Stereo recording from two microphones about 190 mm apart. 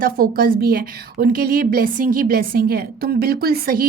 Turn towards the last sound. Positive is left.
turn(degrees=-50)  # may be behind; listen again after turning